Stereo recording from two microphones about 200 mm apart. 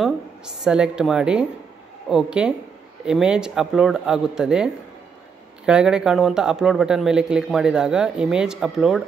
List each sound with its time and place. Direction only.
0.7 s a man's voice: 5° right (ahead or behind)
5.7 s a man's voice: 5° right (ahead or behind)